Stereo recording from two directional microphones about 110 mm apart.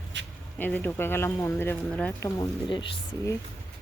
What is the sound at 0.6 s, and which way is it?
Speech, 15° left (ahead or behind).